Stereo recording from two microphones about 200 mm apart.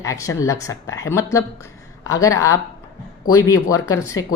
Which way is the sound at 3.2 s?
90° left.